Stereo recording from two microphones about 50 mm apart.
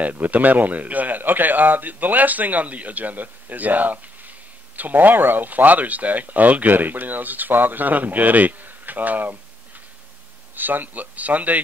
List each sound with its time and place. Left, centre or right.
0.0 s speech: right
10.5 s speech: right